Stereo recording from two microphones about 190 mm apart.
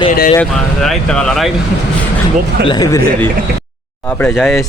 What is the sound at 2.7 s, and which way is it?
Speech, 20° left (ahead or behind).